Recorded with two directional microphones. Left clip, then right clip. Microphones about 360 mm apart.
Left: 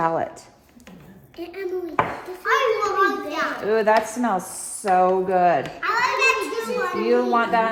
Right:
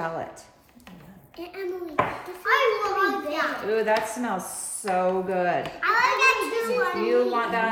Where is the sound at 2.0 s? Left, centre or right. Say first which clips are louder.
Left 1 dB; centre.